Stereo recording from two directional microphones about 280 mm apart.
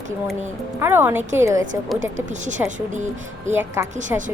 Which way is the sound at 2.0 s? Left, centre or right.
Right.